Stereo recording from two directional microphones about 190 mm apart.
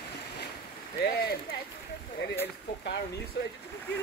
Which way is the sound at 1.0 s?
55° left (ahead or behind).